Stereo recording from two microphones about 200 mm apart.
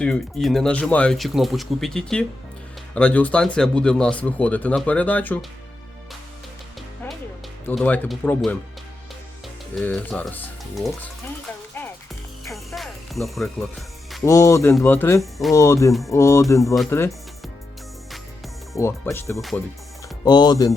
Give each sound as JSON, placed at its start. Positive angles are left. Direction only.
{"t": 0.0, "sound": "speech", "side_deg": 5}
{"t": 7.7, "sound": "speech", "side_deg": 10}
{"t": 9.7, "sound": "speech", "side_deg": 5}
{"t": 12.5, "sound": "music", "side_deg": 0}
{"t": 14.3, "sound": "speech", "side_deg": 15}
{"t": 15.2, "sound": "speech", "side_deg": 0}
{"t": 15.5, "sound": "speech", "side_deg": 15}
{"t": 18.1, "sound": "music", "side_deg": 0}
{"t": 18.8, "sound": "speech", "side_deg": 15}